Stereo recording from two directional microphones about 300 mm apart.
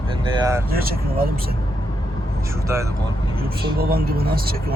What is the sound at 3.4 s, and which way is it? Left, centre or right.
Speech, right.